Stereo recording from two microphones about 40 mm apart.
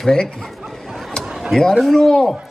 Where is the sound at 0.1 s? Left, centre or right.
Centre.